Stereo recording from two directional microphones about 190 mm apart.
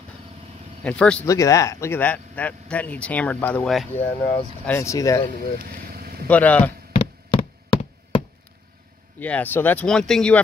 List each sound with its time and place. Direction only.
0.8 s speech: 5° left (ahead or behind)
1.2 s speech: 15° left (ahead or behind)
5.9 s vehicle: 55° right (ahead or behind)
6.2 s speech: 10° left (ahead or behind)
6.9 s a sound: 30° left (ahead or behind)
9.2 s speech: 10° left (ahead or behind)